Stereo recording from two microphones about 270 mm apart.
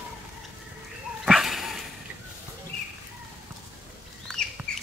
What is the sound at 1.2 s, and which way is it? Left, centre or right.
Dog, centre.